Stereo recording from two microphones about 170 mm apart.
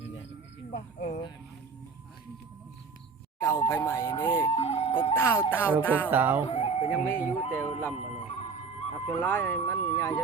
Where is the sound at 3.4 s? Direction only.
15° left (ahead or behind).